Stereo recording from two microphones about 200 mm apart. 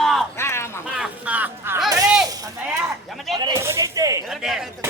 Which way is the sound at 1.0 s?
5° right (ahead or behind).